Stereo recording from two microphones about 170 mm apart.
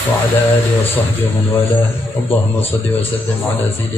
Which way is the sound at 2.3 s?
10° left (ahead or behind).